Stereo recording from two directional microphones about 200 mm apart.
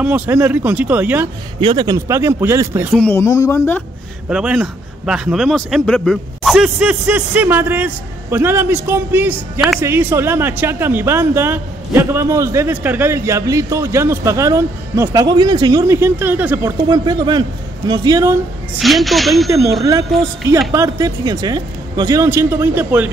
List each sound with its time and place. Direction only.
0.0 s speech: 5° right (ahead or behind)
1.6 s speech: 25° right (ahead or behind)
2.9 s speech: 5° left (ahead or behind)
4.3 s speech: 5° right (ahead or behind)
18.8 s a woman's voice: centre (ahead or behind)
19.5 s speech: 15° right (ahead or behind)